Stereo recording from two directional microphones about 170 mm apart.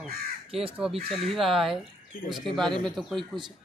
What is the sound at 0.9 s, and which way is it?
Speech, 35° right (ahead or behind).